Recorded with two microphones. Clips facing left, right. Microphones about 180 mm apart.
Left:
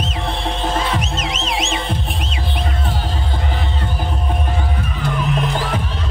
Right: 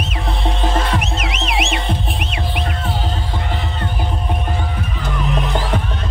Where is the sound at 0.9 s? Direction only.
60° right (ahead or behind).